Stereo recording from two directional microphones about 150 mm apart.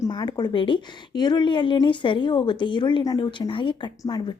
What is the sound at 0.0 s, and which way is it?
A woman's voice, 30° left (ahead or behind).